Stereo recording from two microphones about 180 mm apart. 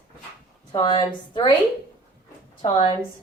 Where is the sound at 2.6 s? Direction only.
25° left (ahead or behind).